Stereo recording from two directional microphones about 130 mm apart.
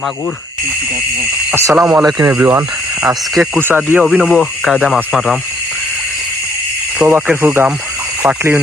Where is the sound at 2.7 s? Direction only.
30° right (ahead or behind).